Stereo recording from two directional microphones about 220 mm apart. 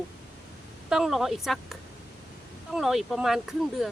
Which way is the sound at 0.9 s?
Centre (ahead or behind).